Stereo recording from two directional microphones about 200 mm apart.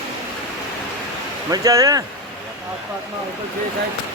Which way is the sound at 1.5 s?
15° right (ahead or behind).